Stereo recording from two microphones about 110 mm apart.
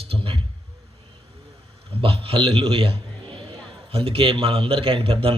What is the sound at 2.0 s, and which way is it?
Speech, 60° right (ahead or behind).